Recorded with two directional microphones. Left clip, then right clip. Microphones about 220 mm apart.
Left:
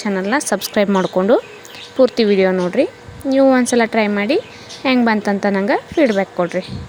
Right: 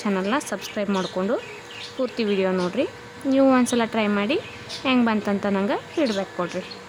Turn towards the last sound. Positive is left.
turn(degrees=20)  # may be behind; listen again after turning